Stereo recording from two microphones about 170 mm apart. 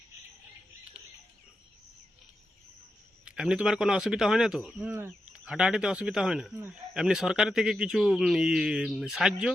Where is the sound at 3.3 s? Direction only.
5° right (ahead or behind).